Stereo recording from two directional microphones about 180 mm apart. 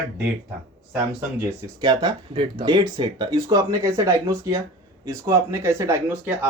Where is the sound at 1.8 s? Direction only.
25° right (ahead or behind).